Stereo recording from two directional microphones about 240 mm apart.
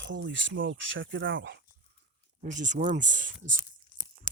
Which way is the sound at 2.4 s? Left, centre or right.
Right.